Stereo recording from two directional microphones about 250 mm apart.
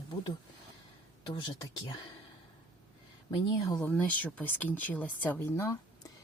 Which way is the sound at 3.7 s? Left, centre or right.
Centre.